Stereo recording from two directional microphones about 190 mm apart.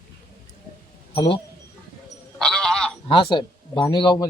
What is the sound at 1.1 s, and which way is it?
Speech, 25° left (ahead or behind).